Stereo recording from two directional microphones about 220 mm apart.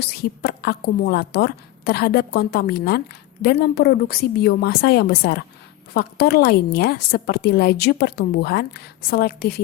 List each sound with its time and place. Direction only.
0.0 s a woman's voice: 45° left (ahead or behind)